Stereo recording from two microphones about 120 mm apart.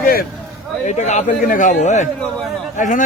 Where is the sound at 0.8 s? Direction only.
80° left.